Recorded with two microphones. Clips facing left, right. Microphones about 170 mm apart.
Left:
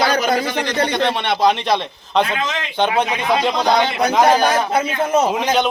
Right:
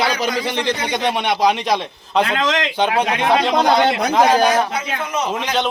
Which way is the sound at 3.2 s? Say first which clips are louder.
Right 2 dB; 70° right (ahead or behind).